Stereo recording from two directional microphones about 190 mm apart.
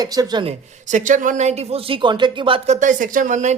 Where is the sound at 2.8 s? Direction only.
40° right (ahead or behind).